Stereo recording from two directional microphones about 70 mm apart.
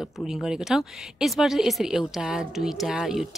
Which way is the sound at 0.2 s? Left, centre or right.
Centre.